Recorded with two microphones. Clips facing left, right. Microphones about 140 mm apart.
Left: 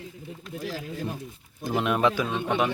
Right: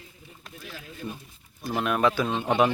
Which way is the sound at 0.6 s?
90° left.